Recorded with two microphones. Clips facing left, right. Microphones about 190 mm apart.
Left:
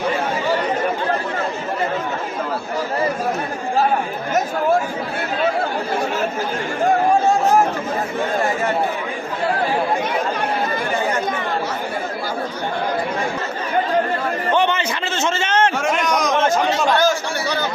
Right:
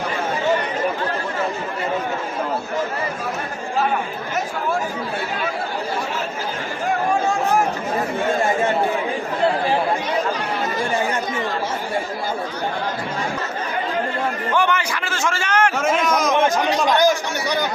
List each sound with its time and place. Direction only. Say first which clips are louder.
14.5 s a man's voice: left 2 dB; 20° left (ahead or behind)
15.8 s a man's voice: even; centre (ahead or behind)
16.4 s speech: left 1 dB; 15° right (ahead or behind)